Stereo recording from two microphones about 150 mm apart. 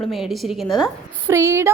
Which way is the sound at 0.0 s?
Centre (ahead or behind).